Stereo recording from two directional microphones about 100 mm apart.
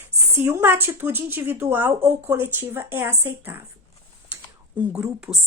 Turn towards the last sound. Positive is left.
turn(degrees=-30)  # may be behind; listen again after turning